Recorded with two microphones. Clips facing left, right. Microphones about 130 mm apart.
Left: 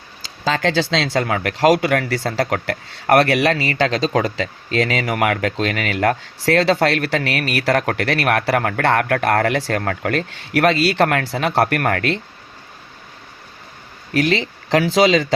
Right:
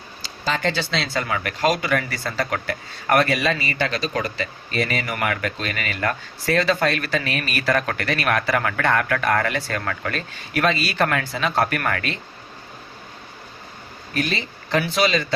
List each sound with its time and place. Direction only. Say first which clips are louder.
0.5 s speech: left 5 dB; 90° left; by 12.2 s 70° left (ahead or behind)
14.1 s speech: left 7 dB; 90° left